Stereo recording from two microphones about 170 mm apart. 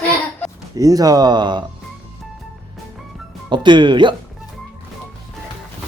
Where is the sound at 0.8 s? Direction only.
20° right (ahead or behind).